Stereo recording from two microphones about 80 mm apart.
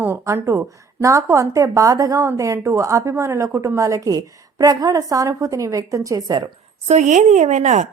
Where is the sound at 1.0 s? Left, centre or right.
Right.